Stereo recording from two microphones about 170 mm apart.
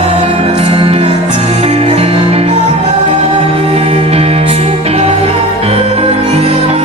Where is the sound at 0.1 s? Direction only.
35° right (ahead or behind).